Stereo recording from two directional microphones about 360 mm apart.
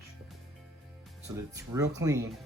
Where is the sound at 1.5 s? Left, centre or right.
Centre.